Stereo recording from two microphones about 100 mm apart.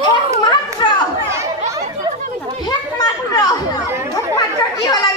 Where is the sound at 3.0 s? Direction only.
40° left (ahead or behind).